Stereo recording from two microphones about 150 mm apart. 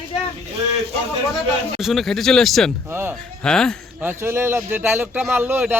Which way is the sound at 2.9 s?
15° right (ahead or behind).